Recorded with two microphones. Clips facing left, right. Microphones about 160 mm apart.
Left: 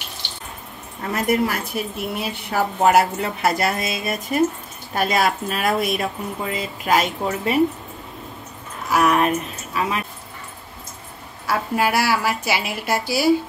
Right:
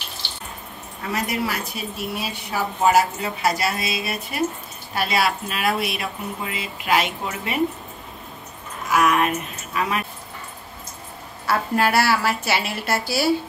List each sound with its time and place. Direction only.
1.1 s a woman's voice: 50° left (ahead or behind)
8.9 s speech: 35° left (ahead or behind)
11.4 s a woman's voice: 10° left (ahead or behind)